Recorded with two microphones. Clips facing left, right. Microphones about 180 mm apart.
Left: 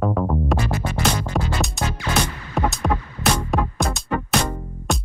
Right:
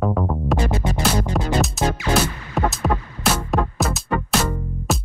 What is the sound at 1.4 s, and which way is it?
Music, centre (ahead or behind).